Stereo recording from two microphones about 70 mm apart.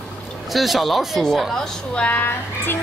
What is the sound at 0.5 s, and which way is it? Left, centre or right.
Speech, centre.